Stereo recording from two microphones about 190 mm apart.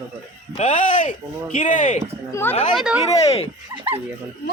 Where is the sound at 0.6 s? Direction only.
40° left (ahead or behind).